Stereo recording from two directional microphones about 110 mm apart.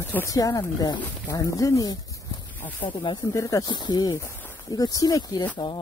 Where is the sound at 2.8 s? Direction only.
50° left (ahead or behind).